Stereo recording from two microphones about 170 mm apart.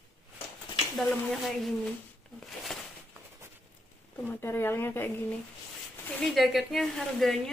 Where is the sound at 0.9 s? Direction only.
Centre (ahead or behind).